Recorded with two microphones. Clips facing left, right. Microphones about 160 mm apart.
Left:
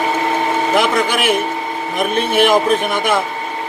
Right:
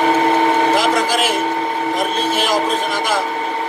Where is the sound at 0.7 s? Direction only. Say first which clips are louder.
Left 1 dB; 60° left (ahead or behind).